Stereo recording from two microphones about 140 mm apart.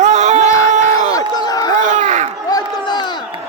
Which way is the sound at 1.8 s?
60° right (ahead or behind).